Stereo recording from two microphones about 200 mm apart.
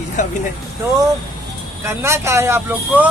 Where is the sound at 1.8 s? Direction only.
15° right (ahead or behind).